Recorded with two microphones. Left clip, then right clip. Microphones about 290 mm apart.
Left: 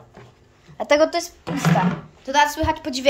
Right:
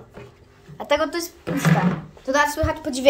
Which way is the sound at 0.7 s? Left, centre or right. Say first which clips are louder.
Left 4 dB; centre.